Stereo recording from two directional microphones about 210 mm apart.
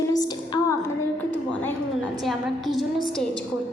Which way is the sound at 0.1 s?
20° left (ahead or behind).